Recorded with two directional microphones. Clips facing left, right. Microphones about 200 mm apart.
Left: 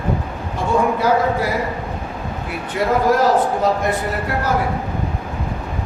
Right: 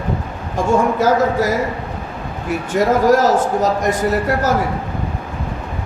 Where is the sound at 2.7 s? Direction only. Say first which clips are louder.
Right 3 dB; 45° right (ahead or behind).